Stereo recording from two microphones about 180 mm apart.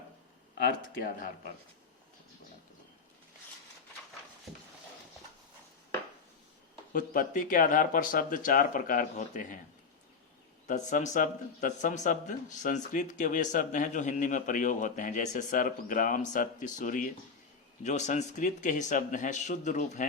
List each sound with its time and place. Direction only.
0.5 s speech: 65° left (ahead or behind)
6.9 s speech: 50° left (ahead or behind)
10.7 s speech: 45° left (ahead or behind)